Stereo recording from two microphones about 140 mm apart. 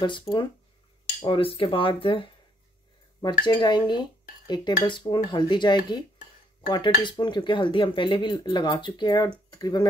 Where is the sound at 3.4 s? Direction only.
30° left (ahead or behind).